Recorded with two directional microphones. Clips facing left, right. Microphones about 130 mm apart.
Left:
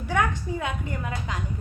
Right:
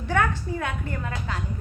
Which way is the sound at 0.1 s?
15° left (ahead or behind).